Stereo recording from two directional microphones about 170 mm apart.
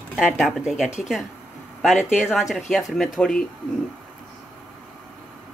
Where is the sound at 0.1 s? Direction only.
Centre (ahead or behind).